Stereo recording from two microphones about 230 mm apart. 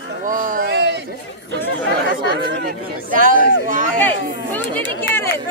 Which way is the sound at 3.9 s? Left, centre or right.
Centre.